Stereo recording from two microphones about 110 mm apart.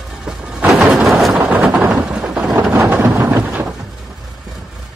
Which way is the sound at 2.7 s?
25° right (ahead or behind).